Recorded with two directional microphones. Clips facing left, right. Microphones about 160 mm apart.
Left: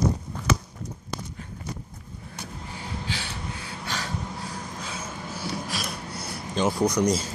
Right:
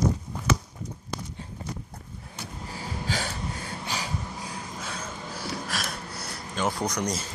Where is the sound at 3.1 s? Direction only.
45° right (ahead or behind).